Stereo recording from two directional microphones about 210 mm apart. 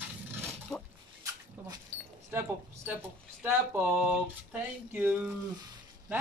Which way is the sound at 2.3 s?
10° right (ahead or behind).